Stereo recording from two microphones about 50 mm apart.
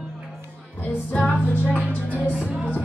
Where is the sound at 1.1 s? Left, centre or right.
Left.